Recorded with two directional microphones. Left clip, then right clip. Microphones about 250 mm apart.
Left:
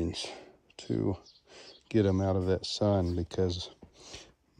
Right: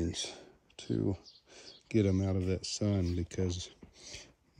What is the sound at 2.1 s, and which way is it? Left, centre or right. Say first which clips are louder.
Speech: left 5 dB; centre.